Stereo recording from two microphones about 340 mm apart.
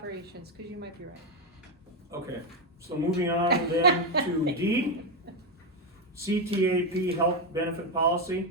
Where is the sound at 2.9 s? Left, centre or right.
Centre.